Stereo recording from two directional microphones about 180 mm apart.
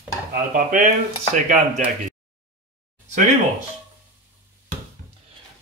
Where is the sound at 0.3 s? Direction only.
50° right (ahead or behind).